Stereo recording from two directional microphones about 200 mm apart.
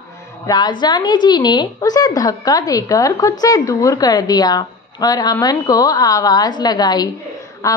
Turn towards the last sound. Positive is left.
turn(degrees=15)  # may be behind; listen again after turning